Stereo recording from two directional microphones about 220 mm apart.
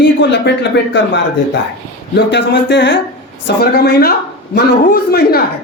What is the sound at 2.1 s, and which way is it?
Speech, 50° left (ahead or behind).